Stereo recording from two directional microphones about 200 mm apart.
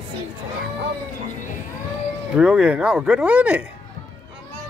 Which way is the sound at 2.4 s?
5° right (ahead or behind).